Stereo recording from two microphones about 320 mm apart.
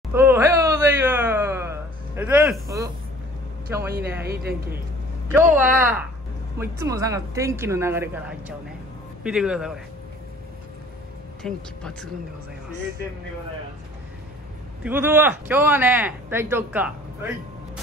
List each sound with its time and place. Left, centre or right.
0.1 s a sound: centre
4.2 s speech: right
5.3 s speech: centre
11.4 s speech: centre
14.8 s speech: centre